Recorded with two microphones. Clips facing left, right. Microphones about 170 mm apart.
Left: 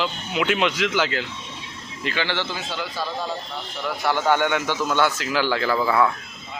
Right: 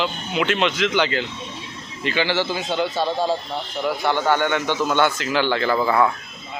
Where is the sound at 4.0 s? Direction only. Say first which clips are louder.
Left 1 dB; 5° left (ahead or behind).